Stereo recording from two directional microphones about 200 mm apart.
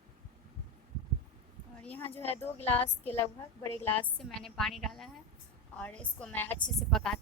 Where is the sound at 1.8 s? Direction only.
5° left (ahead or behind).